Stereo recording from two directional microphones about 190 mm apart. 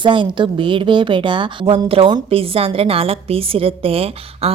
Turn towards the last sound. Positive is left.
turn(degrees=-30)  # may be behind; listen again after turning